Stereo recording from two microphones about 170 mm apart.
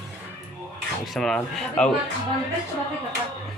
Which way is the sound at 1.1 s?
5° left (ahead or behind).